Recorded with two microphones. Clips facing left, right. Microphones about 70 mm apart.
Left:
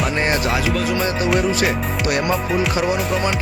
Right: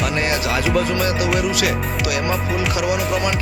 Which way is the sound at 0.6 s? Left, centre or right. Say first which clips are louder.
Right 2 dB; centre.